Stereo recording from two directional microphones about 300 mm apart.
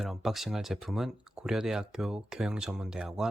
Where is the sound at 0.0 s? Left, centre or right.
Centre.